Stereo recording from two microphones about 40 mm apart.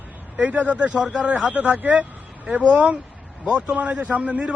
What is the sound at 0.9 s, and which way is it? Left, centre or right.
Speech, right.